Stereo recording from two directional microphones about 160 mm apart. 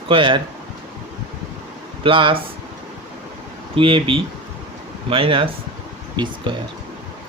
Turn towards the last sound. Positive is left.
turn(degrees=-30)  # may be behind; listen again after turning